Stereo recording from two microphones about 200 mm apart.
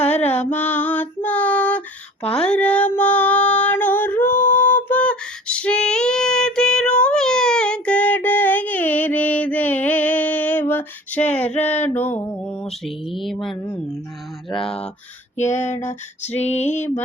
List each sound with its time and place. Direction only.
0.0 s female singing: 10° left (ahead or behind)
11.3 s male singing: 10° left (ahead or behind)
13.1 s a sound: centre (ahead or behind)
15.4 s female singing: 35° left (ahead or behind)
16.6 s male singing: 10° left (ahead or behind)